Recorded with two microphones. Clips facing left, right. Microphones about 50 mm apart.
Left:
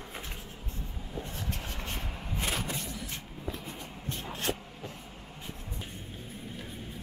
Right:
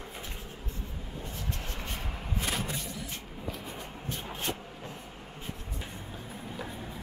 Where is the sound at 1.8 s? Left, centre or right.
Centre.